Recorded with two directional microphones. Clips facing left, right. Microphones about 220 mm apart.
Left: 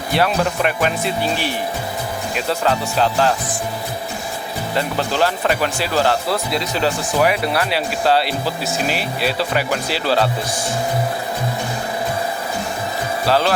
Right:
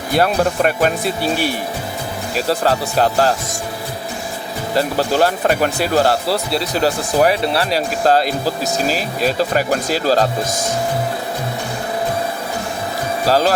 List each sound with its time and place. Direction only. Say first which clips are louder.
0.1 s speech: right 3 dB; 45° right (ahead or behind)
4.8 s speech: right 4 dB; 40° right (ahead or behind)
6.2 s speech: right 2 dB; 35° right (ahead or behind)
13.2 s speech: right 2 dB; 40° right (ahead or behind)